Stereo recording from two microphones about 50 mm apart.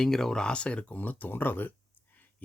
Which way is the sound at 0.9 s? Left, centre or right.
Left.